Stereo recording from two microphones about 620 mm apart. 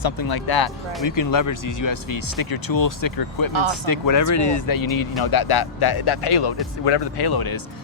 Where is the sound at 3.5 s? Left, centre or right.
Right.